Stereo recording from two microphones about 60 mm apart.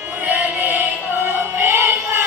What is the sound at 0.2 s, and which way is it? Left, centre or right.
Music, right.